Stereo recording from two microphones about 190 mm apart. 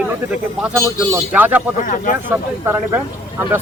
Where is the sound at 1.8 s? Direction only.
40° left (ahead or behind).